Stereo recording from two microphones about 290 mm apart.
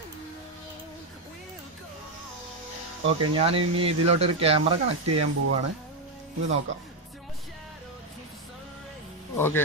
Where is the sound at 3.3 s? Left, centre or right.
Centre.